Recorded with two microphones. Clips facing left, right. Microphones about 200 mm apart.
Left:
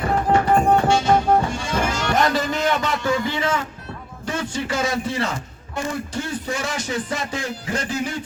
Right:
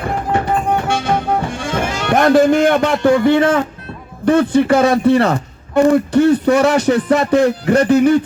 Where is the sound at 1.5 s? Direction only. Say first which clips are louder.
Right 3 dB; 55° right (ahead or behind).